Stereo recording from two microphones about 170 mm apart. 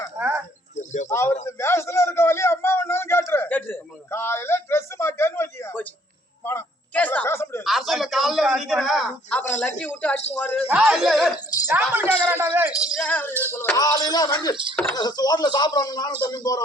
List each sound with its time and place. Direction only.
0.2 s a sound: 10° right (ahead or behind)
0.8 s speech: 45° left (ahead or behind)
1.1 s a woman's voice: 15° left (ahead or behind)
1.5 s a sound: 15° left (ahead or behind)
7.6 s a sound: centre (ahead or behind)
9.6 s a woman's voice: 10° left (ahead or behind)
10.7 s speech: 5° right (ahead or behind)
11.7 s speech: 15° right (ahead or behind)
13.0 s a woman's voice: 10° left (ahead or behind)
14.5 s speech: 30° right (ahead or behind)
14.9 s speech: 25° left (ahead or behind)